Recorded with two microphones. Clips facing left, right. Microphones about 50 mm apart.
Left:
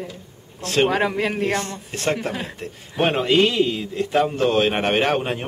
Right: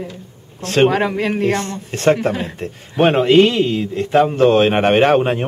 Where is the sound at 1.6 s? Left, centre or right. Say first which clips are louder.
Right 4 dB; right.